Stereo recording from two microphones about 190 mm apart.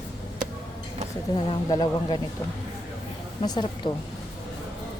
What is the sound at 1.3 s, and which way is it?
Speech, 25° left (ahead or behind).